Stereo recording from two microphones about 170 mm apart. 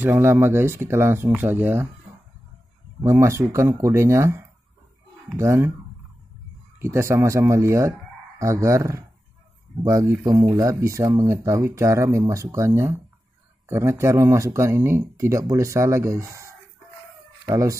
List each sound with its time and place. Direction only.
0.0 s speech: 15° right (ahead or behind)
3.0 s speech: 15° right (ahead or behind)
6.8 s speech: 15° right (ahead or behind)